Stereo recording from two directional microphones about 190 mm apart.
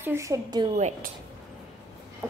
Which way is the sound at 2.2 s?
5° right (ahead or behind).